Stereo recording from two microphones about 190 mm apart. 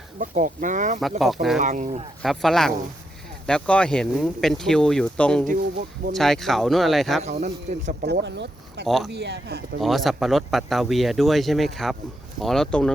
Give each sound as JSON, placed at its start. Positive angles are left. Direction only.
{"t": 0.2, "sound": "speech", "side_deg": -40}
{"t": 1.2, "sound": "speech", "side_deg": 0}
{"t": 1.6, "sound": "speech", "side_deg": -40}
{"t": 2.2, "sound": "speech", "side_deg": 0}
{"t": 5.5, "sound": "speech", "side_deg": -45}
{"t": 6.1, "sound": "speech", "side_deg": 0}
{"t": 7.7, "sound": "speech", "side_deg": -35}
{"t": 8.0, "sound": "speech", "side_deg": -60}
{"t": 9.8, "sound": "speech", "side_deg": 0}